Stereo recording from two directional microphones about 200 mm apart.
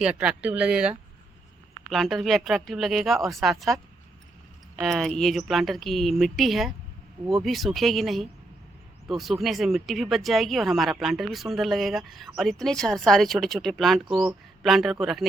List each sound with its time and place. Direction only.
0.0 s speech: 5° right (ahead or behind)
4.8 s speech: centre (ahead or behind)
14.0 s speech: 25° right (ahead or behind)
14.3 s speech: centre (ahead or behind)